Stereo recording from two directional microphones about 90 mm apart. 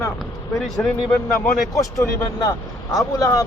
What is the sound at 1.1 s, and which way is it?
Speech, centre (ahead or behind).